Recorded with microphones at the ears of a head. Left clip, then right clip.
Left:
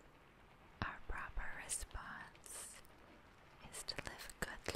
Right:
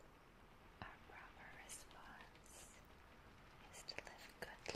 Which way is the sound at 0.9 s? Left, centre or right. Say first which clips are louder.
Left 10 dB; left.